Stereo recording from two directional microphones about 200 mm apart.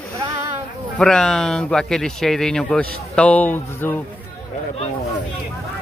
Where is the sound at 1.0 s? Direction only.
5° left (ahead or behind).